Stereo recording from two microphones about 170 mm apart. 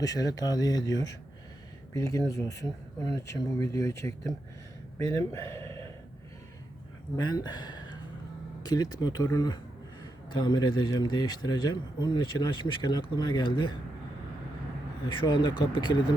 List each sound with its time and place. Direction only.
0.0 s speech: 20° left (ahead or behind)
5.5 s a sound: 15° left (ahead or behind)
7.2 s speech: 25° left (ahead or behind)
15.0 s speech: 25° left (ahead or behind)